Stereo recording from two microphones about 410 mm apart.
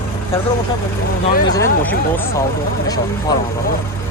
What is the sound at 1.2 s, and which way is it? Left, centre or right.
Speech, left.